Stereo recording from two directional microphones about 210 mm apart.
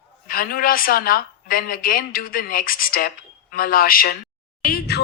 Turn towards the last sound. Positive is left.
turn(degrees=45)  # may be behind; listen again after turning